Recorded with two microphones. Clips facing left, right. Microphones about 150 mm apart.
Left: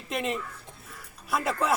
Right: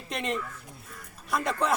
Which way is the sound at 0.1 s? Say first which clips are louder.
Left 1 dB; 5° left (ahead or behind).